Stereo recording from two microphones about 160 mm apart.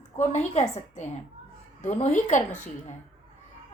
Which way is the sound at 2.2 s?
50° left (ahead or behind).